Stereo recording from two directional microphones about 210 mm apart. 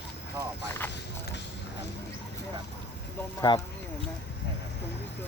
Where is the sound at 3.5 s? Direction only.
20° left (ahead or behind).